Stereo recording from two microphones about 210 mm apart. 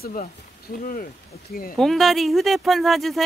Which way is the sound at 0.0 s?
40° left (ahead or behind).